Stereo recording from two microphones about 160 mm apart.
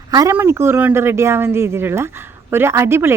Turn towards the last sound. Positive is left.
turn(degrees=-15)  # may be behind; listen again after turning